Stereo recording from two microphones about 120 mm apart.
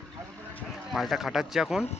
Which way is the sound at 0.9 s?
Centre (ahead or behind).